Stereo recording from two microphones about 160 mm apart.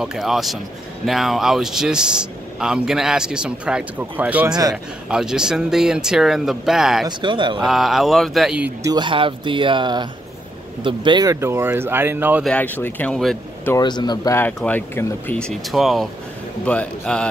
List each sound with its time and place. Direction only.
0.0 s speech: centre (ahead or behind)
7.1 s speech: 30° right (ahead or behind)
7.6 s speech: centre (ahead or behind)
8.8 s speech: 30° right (ahead or behind); by 12.4 s 10° right (ahead or behind)
12.4 s speech: 10° left (ahead or behind)
13.7 s speech: 25° left (ahead or behind); by 17.3 s 5° left (ahead or behind)